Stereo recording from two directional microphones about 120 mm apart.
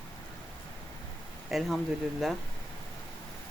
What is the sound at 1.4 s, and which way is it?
Speech, centre (ahead or behind).